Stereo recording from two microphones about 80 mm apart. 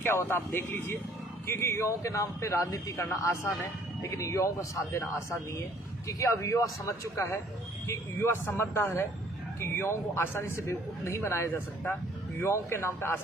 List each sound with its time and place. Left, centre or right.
0.0 s a man's voice: left